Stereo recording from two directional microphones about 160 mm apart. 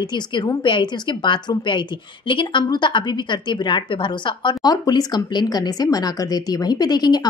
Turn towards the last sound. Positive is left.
turn(degrees=25)  # may be behind; listen again after turning